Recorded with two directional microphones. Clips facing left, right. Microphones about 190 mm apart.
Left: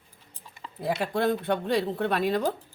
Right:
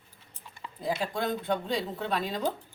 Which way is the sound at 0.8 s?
65° left (ahead or behind).